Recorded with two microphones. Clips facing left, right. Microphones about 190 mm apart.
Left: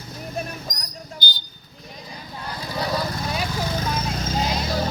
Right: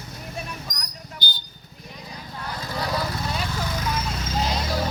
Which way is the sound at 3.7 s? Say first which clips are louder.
Left 2 dB; 35° left (ahead or behind).